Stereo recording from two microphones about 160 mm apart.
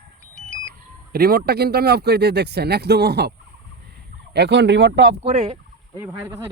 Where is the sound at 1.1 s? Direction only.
70° right (ahead or behind); by 3.3 s 90° right.